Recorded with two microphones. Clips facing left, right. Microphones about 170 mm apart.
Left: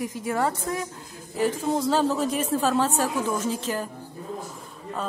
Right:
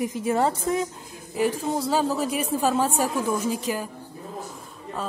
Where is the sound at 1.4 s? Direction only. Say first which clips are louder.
Even; 10° right (ahead or behind).